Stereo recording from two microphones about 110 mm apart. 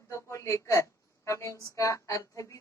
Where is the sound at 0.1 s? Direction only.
25° left (ahead or behind).